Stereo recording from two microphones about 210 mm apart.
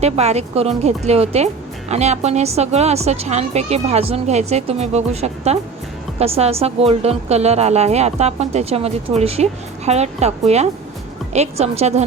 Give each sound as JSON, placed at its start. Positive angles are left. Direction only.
{"t": 0.0, "sound": "a woman's voice", "side_deg": -30}